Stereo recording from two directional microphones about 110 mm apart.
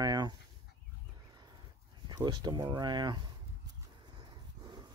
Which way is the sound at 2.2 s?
40° right (ahead or behind).